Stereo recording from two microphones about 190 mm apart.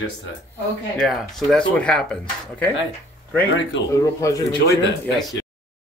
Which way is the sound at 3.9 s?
15° left (ahead or behind).